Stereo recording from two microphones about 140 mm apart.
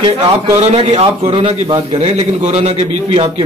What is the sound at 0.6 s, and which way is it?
Speech, 50° right (ahead or behind).